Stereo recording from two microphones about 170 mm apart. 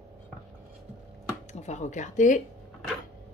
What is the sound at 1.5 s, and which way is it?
Speech, 40° left (ahead or behind).